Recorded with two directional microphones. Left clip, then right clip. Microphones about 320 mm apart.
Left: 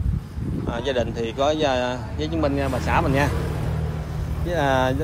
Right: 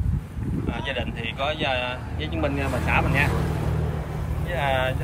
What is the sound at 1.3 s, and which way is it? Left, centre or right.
Speech, left.